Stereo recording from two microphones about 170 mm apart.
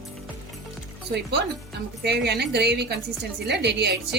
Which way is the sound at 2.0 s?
75° right (ahead or behind).